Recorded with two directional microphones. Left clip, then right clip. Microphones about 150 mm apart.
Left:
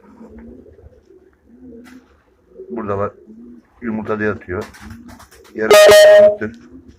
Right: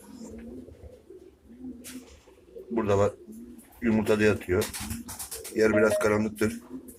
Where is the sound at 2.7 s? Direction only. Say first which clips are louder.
Left 3 dB; 15° right (ahead or behind).